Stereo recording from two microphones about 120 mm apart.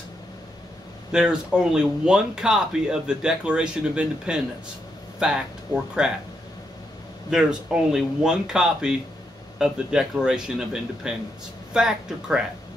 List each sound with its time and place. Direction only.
1.1 s speech: 5° right (ahead or behind)
6.0 s speech: 5° right (ahead or behind)
7.2 s speech: 5° right (ahead or behind)